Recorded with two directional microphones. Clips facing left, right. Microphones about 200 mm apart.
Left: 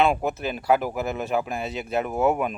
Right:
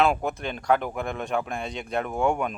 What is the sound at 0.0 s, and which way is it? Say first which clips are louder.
Speech: left 1 dB; centre (ahead or behind).